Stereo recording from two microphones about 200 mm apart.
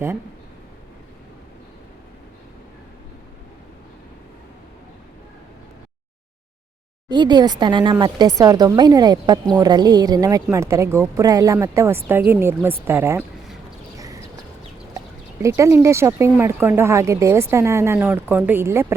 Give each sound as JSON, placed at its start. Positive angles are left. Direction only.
{"t": 7.1, "sound": "speech", "side_deg": -20}
{"t": 13.9, "sound": "a sound", "side_deg": -15}
{"t": 14.9, "sound": "speech", "side_deg": -15}